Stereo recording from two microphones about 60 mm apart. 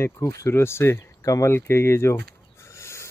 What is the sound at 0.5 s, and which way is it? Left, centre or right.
Speech, left.